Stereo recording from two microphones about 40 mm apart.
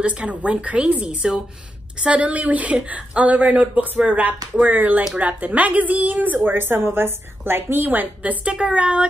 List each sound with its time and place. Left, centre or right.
0.0 s a woman's voice: right
8.5 s speech: right